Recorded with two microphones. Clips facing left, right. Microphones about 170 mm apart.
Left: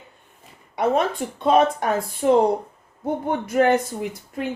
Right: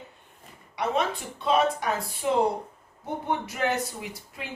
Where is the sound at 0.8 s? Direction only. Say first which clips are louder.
Left 6 dB; 50° left (ahead or behind).